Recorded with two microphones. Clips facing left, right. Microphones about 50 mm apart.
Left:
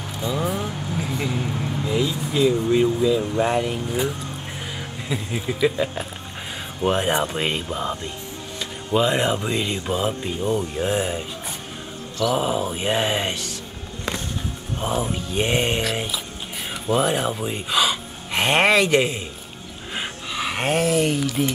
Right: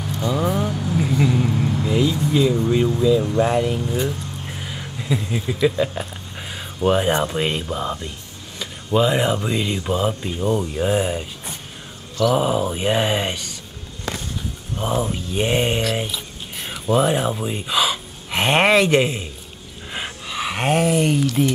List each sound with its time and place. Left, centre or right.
0.3 s speech: centre
0.9 s vehicle: centre
1.9 s speech: centre
14.8 s speech: centre
15.1 s speech: centre
19.9 s a sound: centre